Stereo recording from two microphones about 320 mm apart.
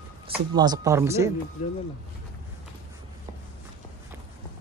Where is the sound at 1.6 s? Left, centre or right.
Left.